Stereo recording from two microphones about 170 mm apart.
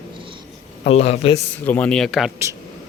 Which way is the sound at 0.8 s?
40° left (ahead or behind).